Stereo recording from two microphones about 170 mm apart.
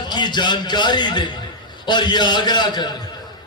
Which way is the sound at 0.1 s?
25° left (ahead or behind).